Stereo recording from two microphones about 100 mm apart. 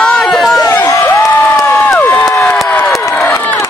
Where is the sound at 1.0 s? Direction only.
25° left (ahead or behind).